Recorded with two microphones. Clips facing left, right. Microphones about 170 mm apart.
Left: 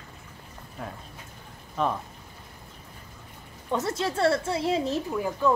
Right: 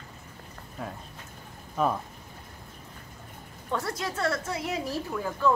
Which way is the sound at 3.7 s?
20° left (ahead or behind).